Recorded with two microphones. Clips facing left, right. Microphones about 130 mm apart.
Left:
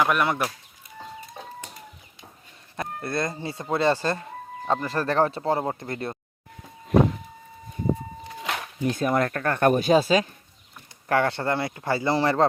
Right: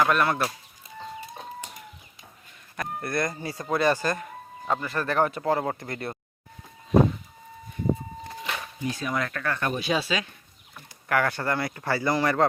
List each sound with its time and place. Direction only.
0.0 s speech: 15° left (ahead or behind)
3.0 s speech: 25° left (ahead or behind)
8.4 s a sound: 85° left
8.9 s speech: 50° left (ahead or behind)
11.1 s speech: 25° left (ahead or behind)